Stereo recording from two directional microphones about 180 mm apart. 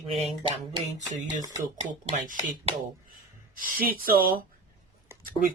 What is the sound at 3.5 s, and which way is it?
Speech, 50° right (ahead or behind).